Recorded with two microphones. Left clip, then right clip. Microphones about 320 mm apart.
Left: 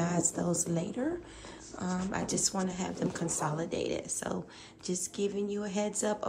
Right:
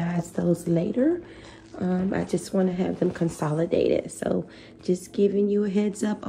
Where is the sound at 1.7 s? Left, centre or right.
Right.